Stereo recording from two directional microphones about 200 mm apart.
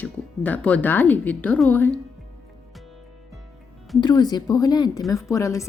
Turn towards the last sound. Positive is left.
turn(degrees=15)  # may be behind; listen again after turning